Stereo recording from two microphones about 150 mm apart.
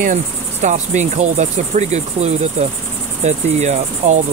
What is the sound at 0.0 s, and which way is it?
Cricket, 55° right (ahead or behind).